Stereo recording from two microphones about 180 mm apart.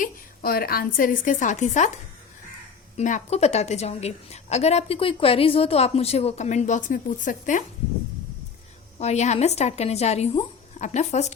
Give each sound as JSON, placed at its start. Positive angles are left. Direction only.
{"t": 0.0, "sound": "a woman's voice", "side_deg": 55}
{"t": 3.0, "sound": "a woman's voice", "side_deg": 45}
{"t": 9.0, "sound": "a woman's voice", "side_deg": 40}